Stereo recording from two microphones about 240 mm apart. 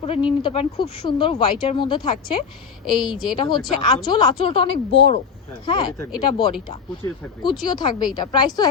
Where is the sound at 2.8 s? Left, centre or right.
Centre.